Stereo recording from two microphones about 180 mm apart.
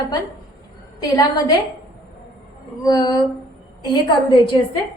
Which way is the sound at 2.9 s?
20° left (ahead or behind).